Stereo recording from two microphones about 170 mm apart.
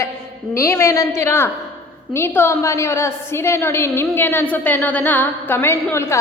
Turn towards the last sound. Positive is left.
turn(degrees=15)  # may be behind; listen again after turning